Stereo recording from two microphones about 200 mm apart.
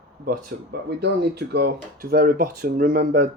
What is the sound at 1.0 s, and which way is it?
Speech, 55° right (ahead or behind).